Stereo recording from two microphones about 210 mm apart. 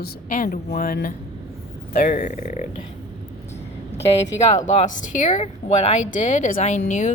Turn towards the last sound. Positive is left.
turn(degrees=35)  # may be behind; listen again after turning